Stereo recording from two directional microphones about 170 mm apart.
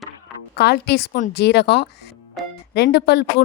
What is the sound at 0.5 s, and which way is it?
Speech, 70° left (ahead or behind).